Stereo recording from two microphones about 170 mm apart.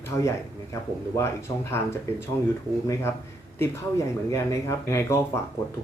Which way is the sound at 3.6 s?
15° left (ahead or behind).